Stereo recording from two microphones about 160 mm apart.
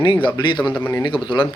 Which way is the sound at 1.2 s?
30° left (ahead or behind).